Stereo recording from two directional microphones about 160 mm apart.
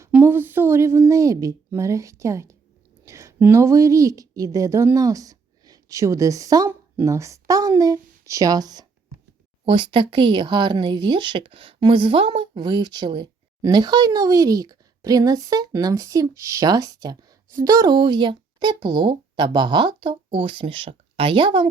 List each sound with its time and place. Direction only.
0.0 s a woman's voice: 15° right (ahead or behind); by 21.7 s 30° right (ahead or behind)